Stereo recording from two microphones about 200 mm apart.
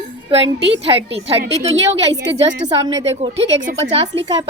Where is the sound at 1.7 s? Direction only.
65° right (ahead or behind).